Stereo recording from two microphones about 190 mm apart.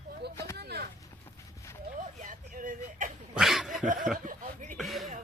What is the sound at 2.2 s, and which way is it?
Speech, 45° right (ahead or behind).